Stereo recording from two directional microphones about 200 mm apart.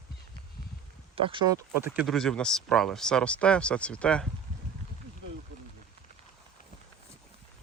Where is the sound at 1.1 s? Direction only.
25° right (ahead or behind).